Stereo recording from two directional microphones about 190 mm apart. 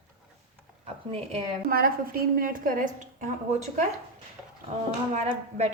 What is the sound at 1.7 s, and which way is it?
A woman's voice, 50° right (ahead or behind).